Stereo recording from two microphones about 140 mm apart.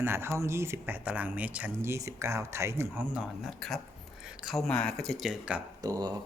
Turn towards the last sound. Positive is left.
turn(degrees=-25)  # may be behind; listen again after turning